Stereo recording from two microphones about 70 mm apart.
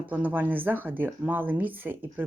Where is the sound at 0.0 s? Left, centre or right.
Right.